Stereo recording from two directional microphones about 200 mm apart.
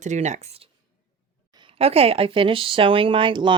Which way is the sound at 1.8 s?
30° right (ahead or behind).